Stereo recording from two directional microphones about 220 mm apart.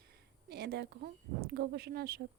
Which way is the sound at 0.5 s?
45° right (ahead or behind).